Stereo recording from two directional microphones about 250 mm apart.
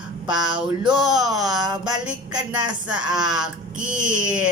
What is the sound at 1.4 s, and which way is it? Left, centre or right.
Music, centre.